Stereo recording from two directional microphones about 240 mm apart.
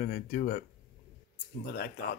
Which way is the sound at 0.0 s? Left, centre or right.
Left.